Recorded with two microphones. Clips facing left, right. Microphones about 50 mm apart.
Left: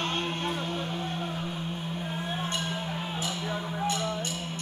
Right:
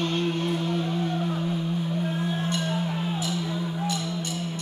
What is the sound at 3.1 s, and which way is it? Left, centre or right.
Music, left.